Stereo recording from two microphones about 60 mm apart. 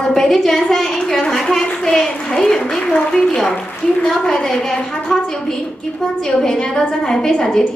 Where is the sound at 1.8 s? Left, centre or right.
Centre.